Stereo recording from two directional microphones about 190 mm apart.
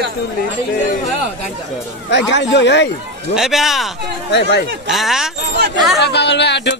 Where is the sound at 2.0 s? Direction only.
65° left (ahead or behind).